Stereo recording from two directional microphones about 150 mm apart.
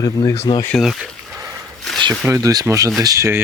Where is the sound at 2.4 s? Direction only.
20° right (ahead or behind).